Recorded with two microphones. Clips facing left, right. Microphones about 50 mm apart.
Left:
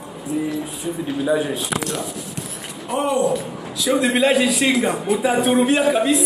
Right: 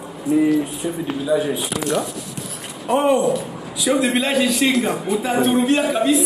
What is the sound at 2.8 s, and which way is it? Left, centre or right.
Speech, right.